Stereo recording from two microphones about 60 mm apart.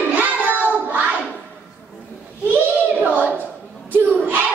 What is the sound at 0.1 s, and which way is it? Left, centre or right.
Child singing, right.